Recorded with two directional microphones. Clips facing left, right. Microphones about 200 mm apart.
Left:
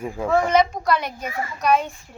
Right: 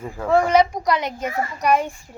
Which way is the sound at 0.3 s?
10° right (ahead or behind).